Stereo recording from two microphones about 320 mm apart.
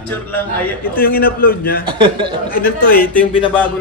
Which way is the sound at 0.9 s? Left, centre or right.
Left.